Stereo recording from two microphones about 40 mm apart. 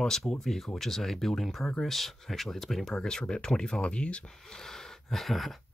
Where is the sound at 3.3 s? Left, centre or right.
Centre.